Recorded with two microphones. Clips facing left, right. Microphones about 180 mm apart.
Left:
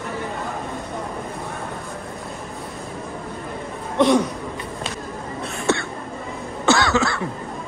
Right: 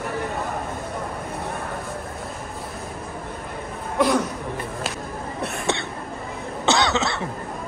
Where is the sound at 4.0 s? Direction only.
Centre (ahead or behind).